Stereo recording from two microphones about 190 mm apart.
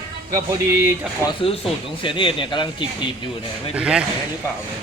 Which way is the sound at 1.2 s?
30° left (ahead or behind).